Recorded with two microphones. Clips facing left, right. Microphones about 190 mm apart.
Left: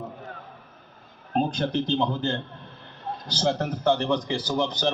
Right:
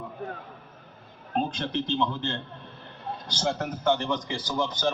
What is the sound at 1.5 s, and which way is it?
A man's voice, 35° left (ahead or behind).